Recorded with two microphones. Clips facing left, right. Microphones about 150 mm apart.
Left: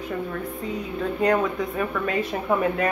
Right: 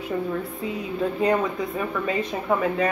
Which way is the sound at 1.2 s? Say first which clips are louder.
Left 2 dB; centre (ahead or behind).